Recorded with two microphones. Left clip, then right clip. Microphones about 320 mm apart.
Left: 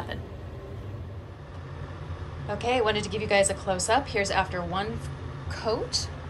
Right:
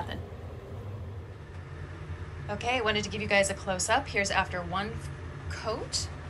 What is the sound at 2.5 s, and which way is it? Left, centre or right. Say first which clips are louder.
A woman's voice: left 3 dB; centre.